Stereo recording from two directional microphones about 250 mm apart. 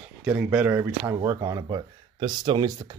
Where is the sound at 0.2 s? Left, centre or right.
Centre.